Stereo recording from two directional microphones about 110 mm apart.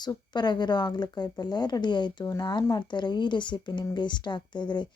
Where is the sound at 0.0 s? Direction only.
40° left (ahead or behind).